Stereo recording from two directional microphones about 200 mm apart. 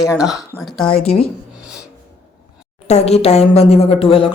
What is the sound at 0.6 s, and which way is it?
Speech, centre (ahead or behind).